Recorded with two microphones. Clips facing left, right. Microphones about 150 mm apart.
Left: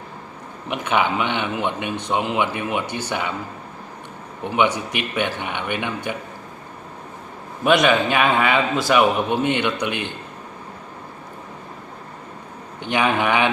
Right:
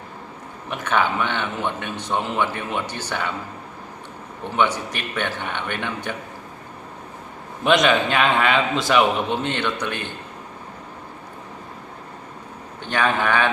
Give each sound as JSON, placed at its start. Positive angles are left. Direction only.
{"t": 0.7, "sound": "a man's voice", "side_deg": 15}
{"t": 4.4, "sound": "a man's voice", "side_deg": 15}
{"t": 7.6, "sound": "a man's voice", "side_deg": 5}
{"t": 12.8, "sound": "a man's voice", "side_deg": 15}